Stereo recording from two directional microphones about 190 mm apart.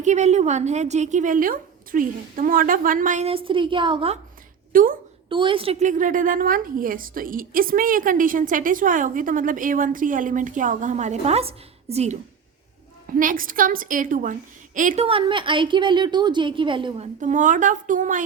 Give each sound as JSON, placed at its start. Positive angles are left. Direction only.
{"t": 0.0, "sound": "a woman's voice", "side_deg": -40}
{"t": 4.7, "sound": "a woman's voice", "side_deg": -45}
{"t": 5.3, "sound": "a woman's voice", "side_deg": -25}
{"t": 13.1, "sound": "a woman's voice", "side_deg": -45}
{"t": 15.0, "sound": "a woman's voice", "side_deg": -25}
{"t": 17.2, "sound": "a woman's voice", "side_deg": -40}